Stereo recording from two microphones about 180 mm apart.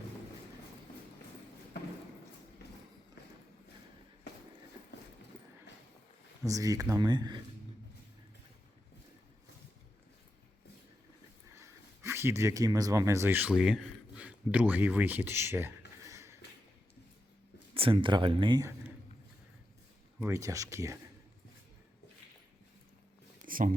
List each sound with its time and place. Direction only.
6.4 s speech: 20° right (ahead or behind)
11.5 s speech: 15° right (ahead or behind)
17.7 s speech: 30° right (ahead or behind)
20.1 s speech: 15° right (ahead or behind)
23.4 s a sound: 50° right (ahead or behind)